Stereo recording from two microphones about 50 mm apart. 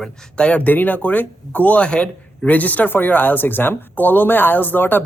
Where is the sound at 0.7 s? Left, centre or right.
Left.